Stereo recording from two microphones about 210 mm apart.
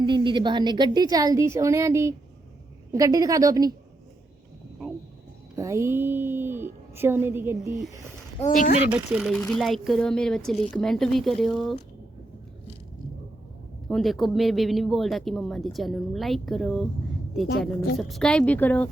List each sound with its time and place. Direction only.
0.0 s a woman's voice: 20° right (ahead or behind)
5.5 s a woman's voice: 15° right (ahead or behind)
8.4 s speech: 40° left (ahead or behind)
8.9 s speech: 5° right (ahead or behind)
13.8 s speech: centre (ahead or behind)
17.9 s speech: centre (ahead or behind)